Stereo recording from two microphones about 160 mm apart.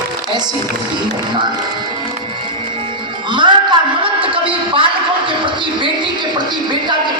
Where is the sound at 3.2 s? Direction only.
30° right (ahead or behind).